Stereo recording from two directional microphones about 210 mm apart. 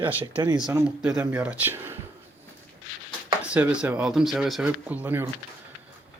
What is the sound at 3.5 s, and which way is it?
Speech, 5° right (ahead or behind).